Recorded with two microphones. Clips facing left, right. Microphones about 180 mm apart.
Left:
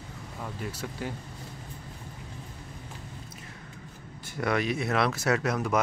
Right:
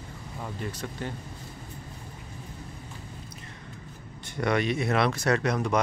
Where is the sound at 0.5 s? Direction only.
5° left (ahead or behind).